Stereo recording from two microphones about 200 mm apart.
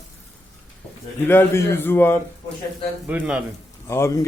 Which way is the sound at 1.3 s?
10° left (ahead or behind).